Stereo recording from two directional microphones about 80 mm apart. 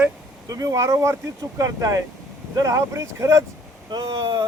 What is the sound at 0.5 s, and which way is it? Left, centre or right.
Speech, right.